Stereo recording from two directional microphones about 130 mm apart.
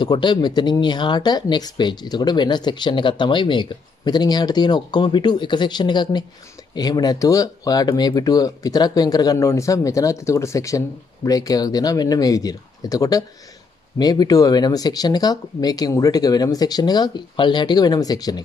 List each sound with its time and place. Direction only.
0.0 s speech: 35° left (ahead or behind)